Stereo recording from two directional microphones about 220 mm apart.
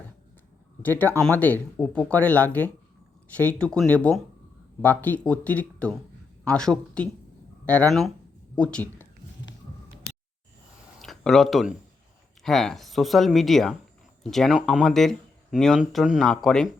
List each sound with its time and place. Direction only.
0.8 s speech: 10° left (ahead or behind)
11.0 s speech: centre (ahead or behind)